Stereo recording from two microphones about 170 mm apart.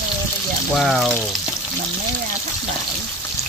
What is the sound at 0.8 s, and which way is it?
Speech, centre (ahead or behind).